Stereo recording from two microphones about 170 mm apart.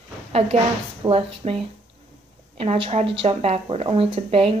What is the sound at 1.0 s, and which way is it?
Speech, 35° right (ahead or behind).